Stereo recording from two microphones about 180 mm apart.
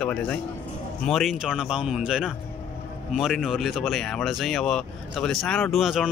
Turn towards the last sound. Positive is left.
turn(degrees=0)  # may be behind; listen again after turning